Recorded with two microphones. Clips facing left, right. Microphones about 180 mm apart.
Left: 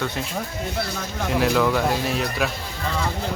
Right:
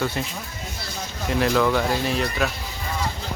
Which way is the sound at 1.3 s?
Centre (ahead or behind).